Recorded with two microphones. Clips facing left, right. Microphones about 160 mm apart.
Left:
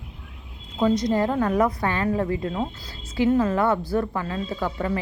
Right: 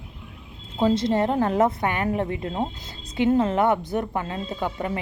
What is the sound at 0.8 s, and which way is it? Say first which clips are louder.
A woman's voice: even; 25° right (ahead or behind).